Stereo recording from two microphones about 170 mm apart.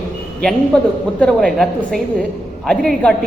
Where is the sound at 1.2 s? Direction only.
5° left (ahead or behind).